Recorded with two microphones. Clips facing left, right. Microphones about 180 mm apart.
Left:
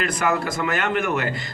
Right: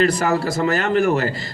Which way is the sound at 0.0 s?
40° right (ahead or behind).